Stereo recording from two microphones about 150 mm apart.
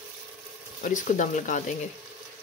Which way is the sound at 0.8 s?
55° left (ahead or behind).